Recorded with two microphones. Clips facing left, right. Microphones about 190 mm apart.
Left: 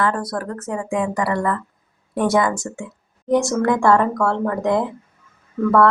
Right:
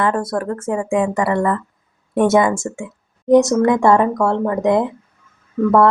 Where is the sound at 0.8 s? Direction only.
15° right (ahead or behind).